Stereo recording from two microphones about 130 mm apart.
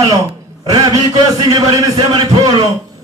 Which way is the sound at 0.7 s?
30° right (ahead or behind).